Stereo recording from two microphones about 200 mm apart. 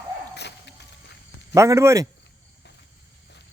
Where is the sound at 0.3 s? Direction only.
60° left (ahead or behind).